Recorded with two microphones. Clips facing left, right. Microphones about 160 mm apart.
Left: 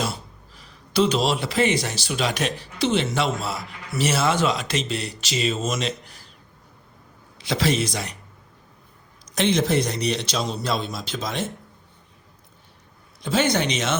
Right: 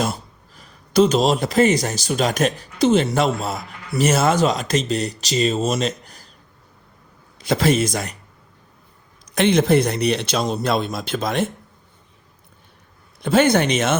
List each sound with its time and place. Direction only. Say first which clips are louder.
0.0 s speech: right 5 dB; 45° right (ahead or behind)
7.3 s speech: right 5 dB; 45° right (ahead or behind)
9.2 s speech: right 4 dB; 60° right (ahead or behind)
13.2 s speech: right 6 dB; 55° right (ahead or behind)